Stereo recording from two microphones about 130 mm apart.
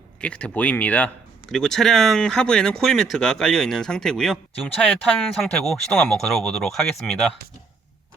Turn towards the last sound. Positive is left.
turn(degrees=5)  # may be behind; listen again after turning